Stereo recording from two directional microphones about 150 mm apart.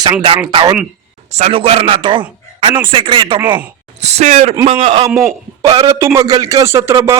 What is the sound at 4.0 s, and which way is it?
A man's voice, 45° right (ahead or behind).